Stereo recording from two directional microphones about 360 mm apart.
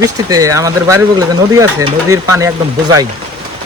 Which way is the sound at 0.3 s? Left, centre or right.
Centre.